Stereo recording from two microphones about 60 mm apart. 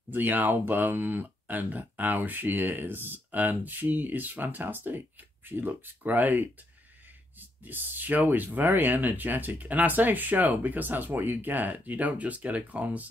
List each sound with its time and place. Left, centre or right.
0.1 s speech: right